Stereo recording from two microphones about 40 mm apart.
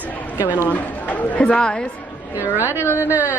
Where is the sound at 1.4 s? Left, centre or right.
Left.